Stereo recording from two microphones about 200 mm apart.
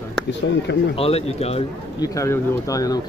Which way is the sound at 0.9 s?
30° left (ahead or behind).